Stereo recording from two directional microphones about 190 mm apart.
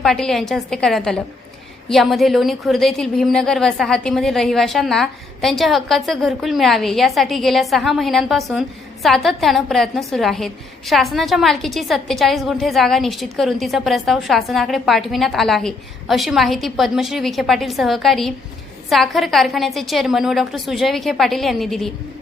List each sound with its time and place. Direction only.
0.0 s a woman's voice: centre (ahead or behind)